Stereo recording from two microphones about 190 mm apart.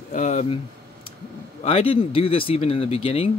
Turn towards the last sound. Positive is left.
turn(degrees=30)  # may be behind; listen again after turning